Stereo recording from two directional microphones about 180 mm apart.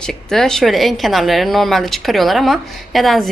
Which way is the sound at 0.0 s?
5° left (ahead or behind).